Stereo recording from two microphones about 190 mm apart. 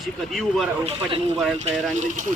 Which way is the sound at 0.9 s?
30° right (ahead or behind).